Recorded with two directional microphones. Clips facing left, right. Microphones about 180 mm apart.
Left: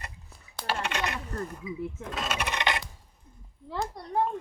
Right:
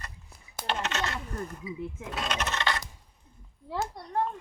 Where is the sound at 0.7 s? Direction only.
10° left (ahead or behind).